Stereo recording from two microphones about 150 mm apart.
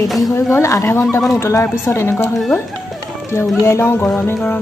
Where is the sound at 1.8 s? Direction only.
15° left (ahead or behind).